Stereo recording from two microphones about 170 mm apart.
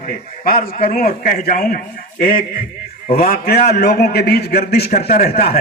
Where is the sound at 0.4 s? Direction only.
55° left (ahead or behind).